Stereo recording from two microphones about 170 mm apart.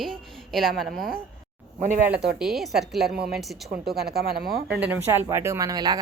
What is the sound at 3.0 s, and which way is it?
Speech, 70° right (ahead or behind).